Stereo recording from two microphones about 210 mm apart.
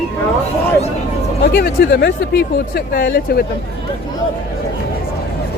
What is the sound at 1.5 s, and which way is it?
Speech, 50° left (ahead or behind).